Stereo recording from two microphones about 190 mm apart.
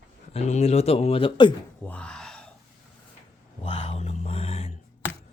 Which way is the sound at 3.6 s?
30° left (ahead or behind).